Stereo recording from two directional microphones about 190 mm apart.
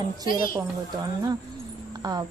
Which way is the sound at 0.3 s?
45° left (ahead or behind).